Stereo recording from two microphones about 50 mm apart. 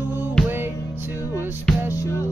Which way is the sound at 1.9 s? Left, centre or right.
Left.